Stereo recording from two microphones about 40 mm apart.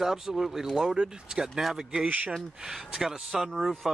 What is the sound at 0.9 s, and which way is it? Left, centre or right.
Speech, right.